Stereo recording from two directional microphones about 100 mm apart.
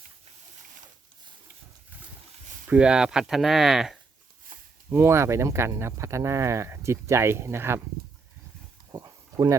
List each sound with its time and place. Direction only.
2.6 s speech: 10° right (ahead or behind)
4.9 s speech: 25° right (ahead or behind)
8.9 s a sound: 35° right (ahead or behind)